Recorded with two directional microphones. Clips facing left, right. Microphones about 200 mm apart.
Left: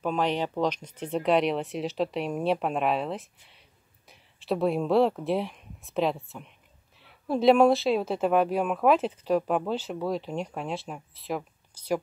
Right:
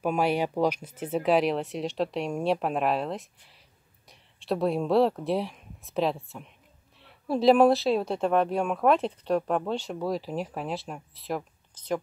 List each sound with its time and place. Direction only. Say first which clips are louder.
0.0 s speech: right 2 dB; 10° right (ahead or behind); by 12.0 s 10° left (ahead or behind)